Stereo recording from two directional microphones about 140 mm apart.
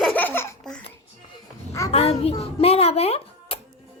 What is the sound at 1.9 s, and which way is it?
A child's voice, 45° left (ahead or behind).